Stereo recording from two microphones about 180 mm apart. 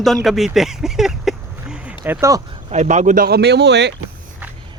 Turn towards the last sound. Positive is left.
turn(degrees=-70)  # may be behind; listen again after turning